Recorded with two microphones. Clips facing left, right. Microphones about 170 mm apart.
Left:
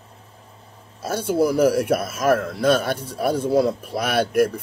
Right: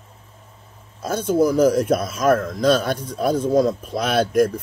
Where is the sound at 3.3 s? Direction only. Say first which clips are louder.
Right 1 dB; 10° left (ahead or behind).